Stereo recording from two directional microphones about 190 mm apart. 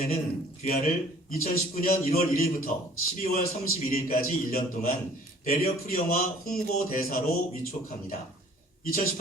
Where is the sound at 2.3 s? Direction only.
50° left (ahead or behind).